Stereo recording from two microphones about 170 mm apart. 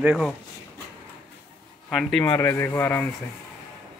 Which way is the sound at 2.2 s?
15° left (ahead or behind).